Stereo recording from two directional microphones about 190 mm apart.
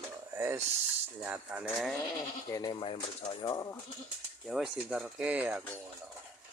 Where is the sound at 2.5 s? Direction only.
20° left (ahead or behind).